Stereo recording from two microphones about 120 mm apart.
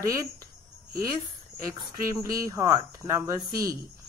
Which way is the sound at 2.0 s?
25° right (ahead or behind).